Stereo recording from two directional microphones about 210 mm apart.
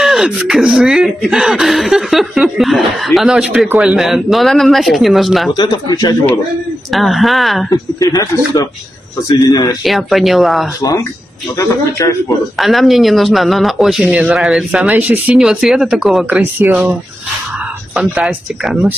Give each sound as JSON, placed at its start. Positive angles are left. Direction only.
{"t": 0.0, "sound": "speech", "side_deg": 0}
{"t": 5.5, "sound": "speech", "side_deg": 20}
{"t": 6.9, "sound": "speech", "side_deg": 0}
{"t": 7.7, "sound": "speech", "side_deg": 15}
{"t": 9.8, "sound": "speech", "side_deg": 0}
{"t": 10.8, "sound": "speech", "side_deg": 15}
{"t": 12.5, "sound": "speech", "side_deg": 0}